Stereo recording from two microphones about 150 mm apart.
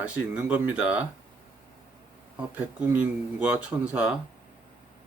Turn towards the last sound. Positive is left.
turn(degrees=-10)  # may be behind; listen again after turning